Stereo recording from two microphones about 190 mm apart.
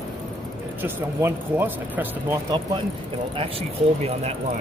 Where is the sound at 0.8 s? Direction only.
10° right (ahead or behind).